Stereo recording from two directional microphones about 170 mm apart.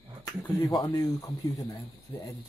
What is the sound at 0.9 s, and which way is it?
Speech, 20° left (ahead or behind).